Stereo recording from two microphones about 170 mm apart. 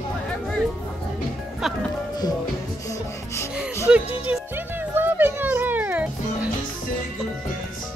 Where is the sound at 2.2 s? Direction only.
20° left (ahead or behind).